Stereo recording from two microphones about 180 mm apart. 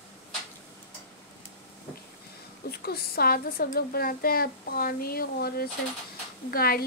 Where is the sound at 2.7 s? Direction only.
60° left (ahead or behind).